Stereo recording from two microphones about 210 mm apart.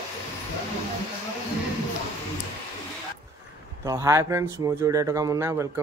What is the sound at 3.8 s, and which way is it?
Speech, 15° right (ahead or behind).